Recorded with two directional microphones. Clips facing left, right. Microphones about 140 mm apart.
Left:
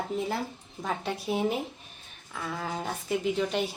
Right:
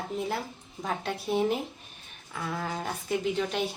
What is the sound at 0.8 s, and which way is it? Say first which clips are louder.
A woman's voice: even; centre (ahead or behind).